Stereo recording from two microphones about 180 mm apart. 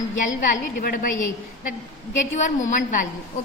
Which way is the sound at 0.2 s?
45° left (ahead or behind).